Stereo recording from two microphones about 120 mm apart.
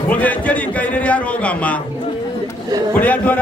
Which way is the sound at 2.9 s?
15° left (ahead or behind).